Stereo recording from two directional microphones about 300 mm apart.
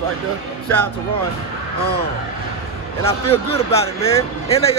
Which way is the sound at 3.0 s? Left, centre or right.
Centre.